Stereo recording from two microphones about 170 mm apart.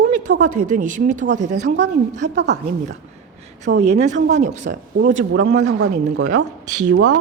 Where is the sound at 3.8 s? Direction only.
40° right (ahead or behind).